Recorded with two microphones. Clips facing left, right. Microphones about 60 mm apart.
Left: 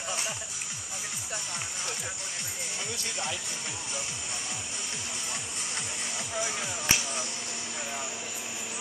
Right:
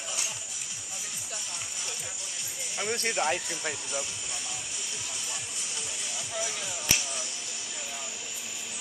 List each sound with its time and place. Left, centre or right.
2.9 s speech: right
6.3 s music: left